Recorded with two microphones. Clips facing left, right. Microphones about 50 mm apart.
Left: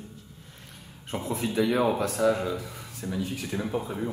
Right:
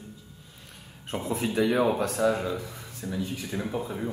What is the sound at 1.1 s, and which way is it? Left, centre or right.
Speech, centre.